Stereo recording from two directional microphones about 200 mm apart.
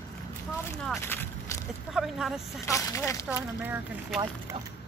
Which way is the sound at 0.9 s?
10° left (ahead or behind).